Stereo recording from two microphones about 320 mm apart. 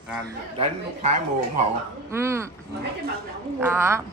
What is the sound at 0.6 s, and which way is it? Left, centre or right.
Speech, right.